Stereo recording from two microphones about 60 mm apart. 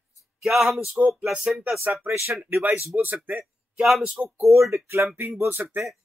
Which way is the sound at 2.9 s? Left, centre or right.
Centre.